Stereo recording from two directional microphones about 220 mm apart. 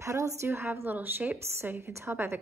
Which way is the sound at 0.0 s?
15° right (ahead or behind).